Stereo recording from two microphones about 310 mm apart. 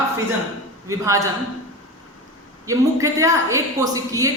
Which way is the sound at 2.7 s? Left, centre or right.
Centre.